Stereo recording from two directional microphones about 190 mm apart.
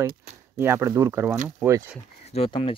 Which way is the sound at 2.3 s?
30° left (ahead or behind).